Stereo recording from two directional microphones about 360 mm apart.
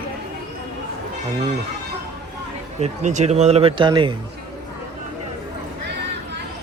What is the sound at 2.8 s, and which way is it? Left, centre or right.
Speech, centre.